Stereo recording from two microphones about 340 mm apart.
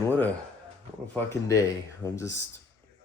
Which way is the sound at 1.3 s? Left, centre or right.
Centre.